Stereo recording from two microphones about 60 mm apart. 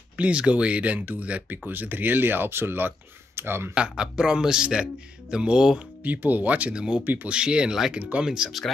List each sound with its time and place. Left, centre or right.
0.2 s speech: centre; by 3.7 s right
3.7 s speech: centre
6.0 s speech: right; by 8.6 s centre